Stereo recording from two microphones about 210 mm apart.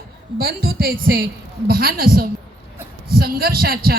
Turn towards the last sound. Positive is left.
turn(degrees=-45)  # may be behind; listen again after turning